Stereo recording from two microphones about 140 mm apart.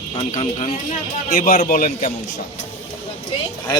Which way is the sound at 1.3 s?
90° left.